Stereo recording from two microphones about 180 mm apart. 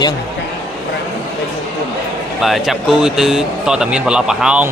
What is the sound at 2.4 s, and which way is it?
Speech, centre (ahead or behind).